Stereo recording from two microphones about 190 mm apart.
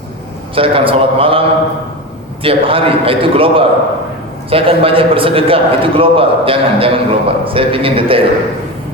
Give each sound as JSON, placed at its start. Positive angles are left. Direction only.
{"t": 0.5, "sound": "a man's voice", "side_deg": -30}